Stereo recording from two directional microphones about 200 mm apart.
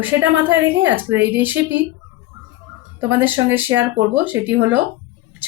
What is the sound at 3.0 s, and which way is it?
Speech, 10° right (ahead or behind).